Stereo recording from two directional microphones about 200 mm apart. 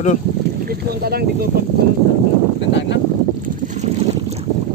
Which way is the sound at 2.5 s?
65° left (ahead or behind).